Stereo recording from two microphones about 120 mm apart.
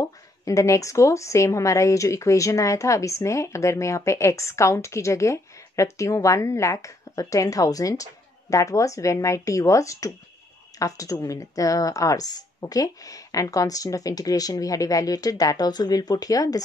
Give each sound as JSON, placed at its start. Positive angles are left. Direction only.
{"t": 0.0, "sound": "speech", "side_deg": 30}